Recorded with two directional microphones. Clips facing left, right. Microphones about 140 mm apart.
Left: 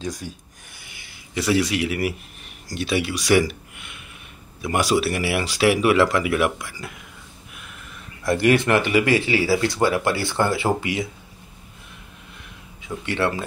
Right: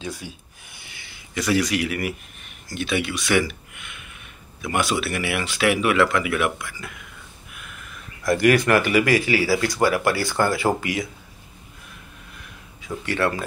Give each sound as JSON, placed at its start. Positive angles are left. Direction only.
{"t": 0.0, "sound": "speech", "side_deg": 40}
{"t": 1.3, "sound": "speech", "side_deg": 30}
{"t": 8.2, "sound": "speech", "side_deg": 30}
{"t": 12.8, "sound": "speech", "side_deg": 25}